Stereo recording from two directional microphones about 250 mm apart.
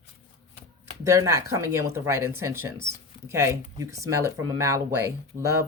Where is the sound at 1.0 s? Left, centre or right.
Centre.